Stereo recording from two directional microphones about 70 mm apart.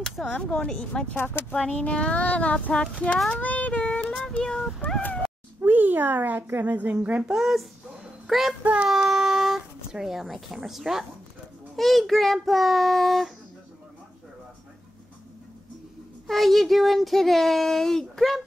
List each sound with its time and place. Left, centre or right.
0.0 s a sound: centre
0.3 s speech: centre
1.1 s speech: left
1.5 s speech: centre
3.3 s child singing: left
4.4 s speech: centre
4.8 s speech: left
5.6 s a child's voice: right
7.3 s speech: centre
8.8 s a sound: centre
11.7 s speech: centre
16.3 s speech: centre